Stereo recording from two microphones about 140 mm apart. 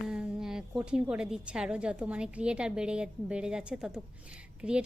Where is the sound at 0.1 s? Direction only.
5° right (ahead or behind).